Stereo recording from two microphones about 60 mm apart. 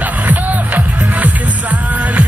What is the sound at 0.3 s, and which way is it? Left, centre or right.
Music, right.